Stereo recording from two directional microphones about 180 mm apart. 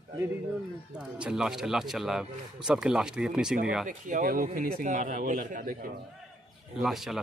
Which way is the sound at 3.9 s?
45° right (ahead or behind).